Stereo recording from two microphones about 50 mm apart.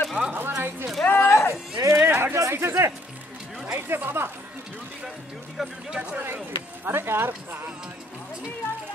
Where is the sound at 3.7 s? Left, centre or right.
Right.